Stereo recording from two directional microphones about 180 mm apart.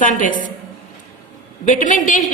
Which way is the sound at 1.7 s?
45° left (ahead or behind).